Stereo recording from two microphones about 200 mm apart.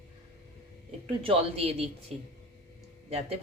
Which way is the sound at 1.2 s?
30° right (ahead or behind).